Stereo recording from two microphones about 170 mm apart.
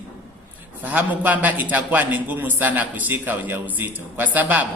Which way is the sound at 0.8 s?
10° right (ahead or behind).